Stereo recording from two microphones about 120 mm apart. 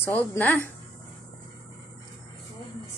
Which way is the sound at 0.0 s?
20° left (ahead or behind).